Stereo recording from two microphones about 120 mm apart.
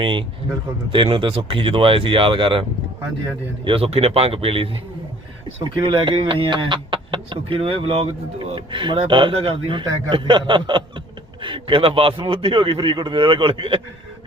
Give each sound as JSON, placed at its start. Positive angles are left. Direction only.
{"t": 0.0, "sound": "speech", "side_deg": -45}